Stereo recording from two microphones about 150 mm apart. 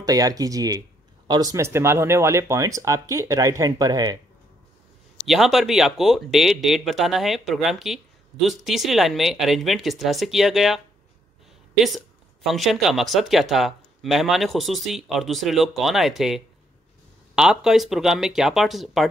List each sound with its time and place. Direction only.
0.0 s speech: 25° right (ahead or behind)
5.2 s speech: centre (ahead or behind)
12.4 s speech: centre (ahead or behind)